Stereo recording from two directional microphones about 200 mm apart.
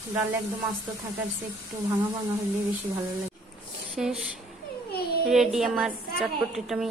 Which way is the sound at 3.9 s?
Centre (ahead or behind).